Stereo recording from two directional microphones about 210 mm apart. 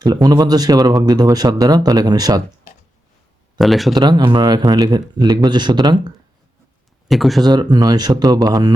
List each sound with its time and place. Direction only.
0.0 s speech: 20° right (ahead or behind)
3.6 s speech: centre (ahead or behind)
3.9 s speech: 20° right (ahead or behind)
7.1 s speech: centre (ahead or behind)
7.4 s speech: 20° right (ahead or behind)